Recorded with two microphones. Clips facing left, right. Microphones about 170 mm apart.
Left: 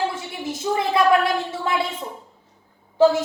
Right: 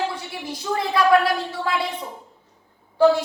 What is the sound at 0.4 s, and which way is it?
A woman's voice, 25° left (ahead or behind).